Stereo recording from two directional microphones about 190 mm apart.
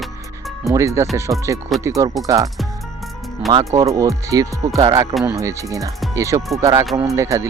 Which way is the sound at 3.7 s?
15° right (ahead or behind).